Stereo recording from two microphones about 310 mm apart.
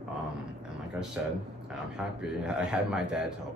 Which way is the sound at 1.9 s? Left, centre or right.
Centre.